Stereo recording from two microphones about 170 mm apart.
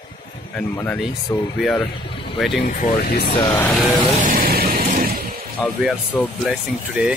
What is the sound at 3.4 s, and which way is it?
Speech, 10° left (ahead or behind).